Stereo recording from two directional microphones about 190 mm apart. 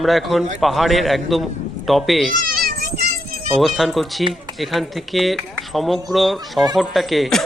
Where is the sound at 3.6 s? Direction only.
Centre (ahead or behind).